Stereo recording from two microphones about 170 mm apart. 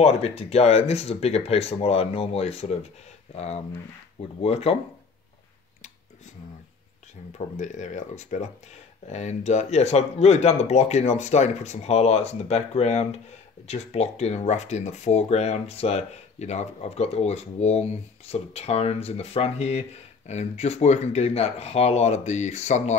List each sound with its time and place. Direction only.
0.0 s speech: 35° left (ahead or behind)
7.3 s speech: 45° left (ahead or behind)